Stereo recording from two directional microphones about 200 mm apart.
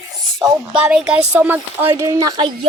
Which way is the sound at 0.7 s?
5° right (ahead or behind).